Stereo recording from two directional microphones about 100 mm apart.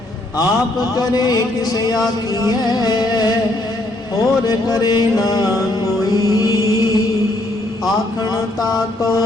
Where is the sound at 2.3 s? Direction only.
40° left (ahead or behind).